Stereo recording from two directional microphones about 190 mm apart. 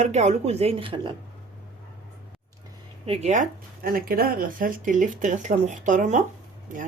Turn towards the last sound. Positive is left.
turn(degrees=-40)  # may be behind; listen again after turning